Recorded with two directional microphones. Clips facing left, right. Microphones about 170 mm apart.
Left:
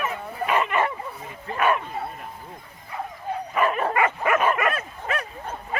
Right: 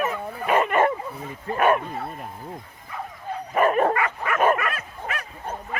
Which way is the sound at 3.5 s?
45° right (ahead or behind).